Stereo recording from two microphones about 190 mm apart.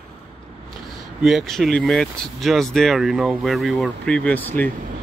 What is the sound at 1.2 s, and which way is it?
Speech, centre (ahead or behind).